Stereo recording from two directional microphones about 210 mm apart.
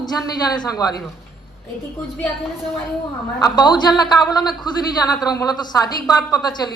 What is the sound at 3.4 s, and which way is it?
Speech, 20° left (ahead or behind).